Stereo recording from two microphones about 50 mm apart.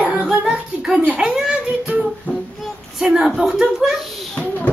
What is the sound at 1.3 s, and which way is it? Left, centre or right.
Speech, centre.